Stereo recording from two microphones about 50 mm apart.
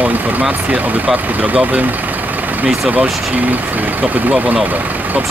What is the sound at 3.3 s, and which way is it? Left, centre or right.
Speech, right.